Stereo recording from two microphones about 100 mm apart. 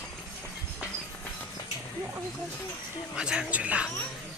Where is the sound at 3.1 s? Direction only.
10° right (ahead or behind).